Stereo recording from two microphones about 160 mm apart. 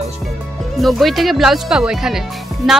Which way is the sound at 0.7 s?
Centre (ahead or behind).